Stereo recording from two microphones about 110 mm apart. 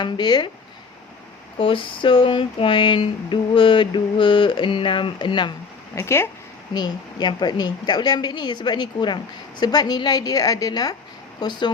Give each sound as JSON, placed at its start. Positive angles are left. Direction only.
{"t": 0.0, "sound": "a woman's voice", "side_deg": 40}
{"t": 1.5, "sound": "a sound", "side_deg": 50}
{"t": 5.9, "sound": "speech", "side_deg": 25}
{"t": 6.7, "sound": "a woman's voice", "side_deg": 40}